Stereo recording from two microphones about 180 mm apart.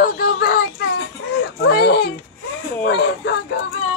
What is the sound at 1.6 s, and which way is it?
Speech, 65° left (ahead or behind).